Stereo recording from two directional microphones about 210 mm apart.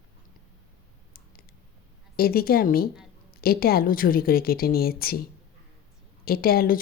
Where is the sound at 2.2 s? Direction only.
45° left (ahead or behind).